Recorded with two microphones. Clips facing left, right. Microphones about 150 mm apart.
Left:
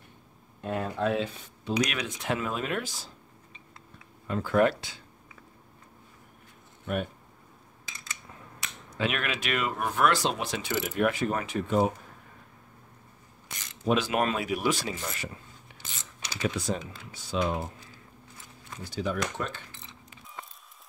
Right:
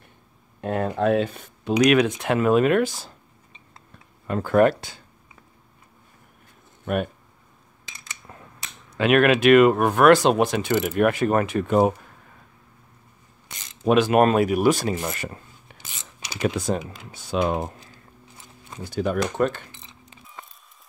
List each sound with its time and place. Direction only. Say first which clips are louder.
0.6 s speech: right 6 dB; 55° right (ahead or behind)
4.3 s speech: right 6 dB; 55° right (ahead or behind)
8.9 s speech: right 13 dB; 65° right (ahead or behind)
13.8 s speech: right 9 dB; 55° right (ahead or behind)
16.2 s typing: right 4 dB; 15° right (ahead or behind)
16.4 s speech: right 6 dB; 55° right (ahead or behind)
16.8 s speech: right 4 dB; 15° right (ahead or behind)
17.1 s speech: right 6 dB; 55° right (ahead or behind)
18.9 s speech: right 7 dB; 55° right (ahead or behind)